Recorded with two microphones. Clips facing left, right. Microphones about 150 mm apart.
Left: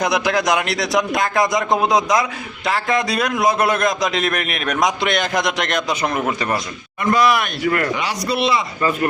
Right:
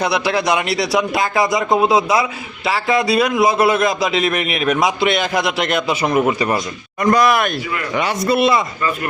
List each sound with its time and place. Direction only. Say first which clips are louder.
0.0 s a man's voice: right 1 dB; 5° right (ahead or behind)
7.0 s speech: right 2 dB; 45° right (ahead or behind)
7.6 s speech: left 6 dB; 55° left (ahead or behind)
8.3 s speech: right 4 dB; 50° right (ahead or behind)